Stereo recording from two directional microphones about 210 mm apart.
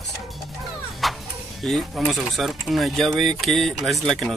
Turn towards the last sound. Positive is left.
turn(degrees=0)  # may be behind; listen again after turning